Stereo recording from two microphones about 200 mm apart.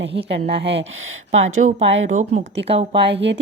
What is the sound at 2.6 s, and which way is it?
Speech, 60° right (ahead or behind).